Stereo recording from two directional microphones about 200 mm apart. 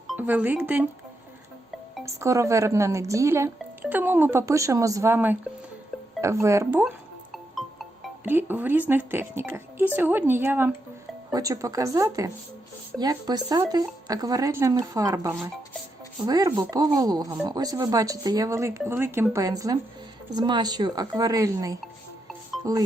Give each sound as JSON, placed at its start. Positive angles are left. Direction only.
{"t": 0.1, "sound": "speech", "side_deg": -5}
{"t": 2.0, "sound": "speech", "side_deg": -15}
{"t": 7.5, "sound": "music", "side_deg": 0}
{"t": 8.3, "sound": "speech", "side_deg": -10}